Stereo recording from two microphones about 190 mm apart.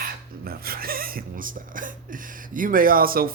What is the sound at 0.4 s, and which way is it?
Speech, 50° right (ahead or behind).